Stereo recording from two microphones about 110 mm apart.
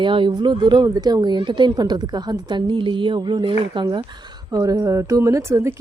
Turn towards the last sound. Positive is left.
turn(degrees=-25)  # may be behind; listen again after turning